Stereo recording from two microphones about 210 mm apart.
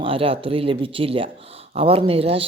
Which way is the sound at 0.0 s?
25° right (ahead or behind).